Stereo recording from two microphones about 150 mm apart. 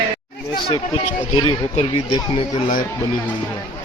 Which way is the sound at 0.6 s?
30° left (ahead or behind).